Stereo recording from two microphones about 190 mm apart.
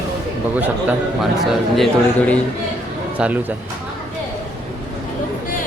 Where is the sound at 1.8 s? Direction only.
5° left (ahead or behind).